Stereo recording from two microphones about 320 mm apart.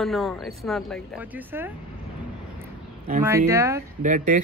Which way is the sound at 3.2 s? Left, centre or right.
Centre.